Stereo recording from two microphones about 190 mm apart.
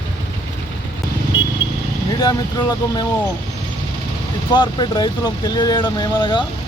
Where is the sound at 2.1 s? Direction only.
20° left (ahead or behind).